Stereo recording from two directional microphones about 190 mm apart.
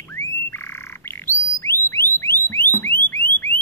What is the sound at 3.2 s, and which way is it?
Car alarm, 55° left (ahead or behind).